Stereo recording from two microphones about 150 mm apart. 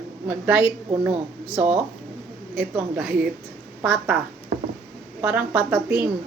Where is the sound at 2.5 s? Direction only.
5° right (ahead or behind).